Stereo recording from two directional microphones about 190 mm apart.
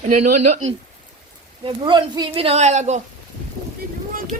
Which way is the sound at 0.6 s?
90° right.